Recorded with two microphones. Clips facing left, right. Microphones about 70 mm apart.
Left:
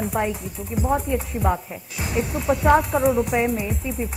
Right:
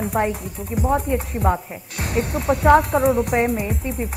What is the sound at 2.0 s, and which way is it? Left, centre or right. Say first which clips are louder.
Speech: right 2 dB; right.